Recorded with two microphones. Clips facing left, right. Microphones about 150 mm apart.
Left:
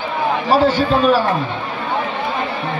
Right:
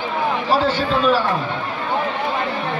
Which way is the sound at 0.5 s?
45° left (ahead or behind).